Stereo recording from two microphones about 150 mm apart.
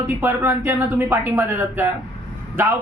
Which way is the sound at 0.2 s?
15° right (ahead or behind).